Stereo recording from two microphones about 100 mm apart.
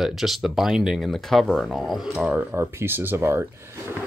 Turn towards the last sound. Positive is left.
turn(degrees=-25)  # may be behind; listen again after turning